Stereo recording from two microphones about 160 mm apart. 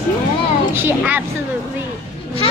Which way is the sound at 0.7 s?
10° right (ahead or behind).